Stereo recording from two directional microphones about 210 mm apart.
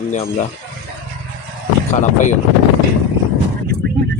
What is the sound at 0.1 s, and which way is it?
Speech, 35° left (ahead or behind).